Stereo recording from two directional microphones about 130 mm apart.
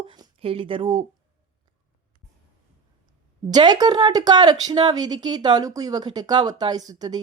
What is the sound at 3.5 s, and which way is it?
Speech, 35° right (ahead or behind).